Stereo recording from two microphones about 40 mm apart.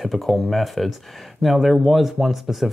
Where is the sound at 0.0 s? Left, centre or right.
Centre.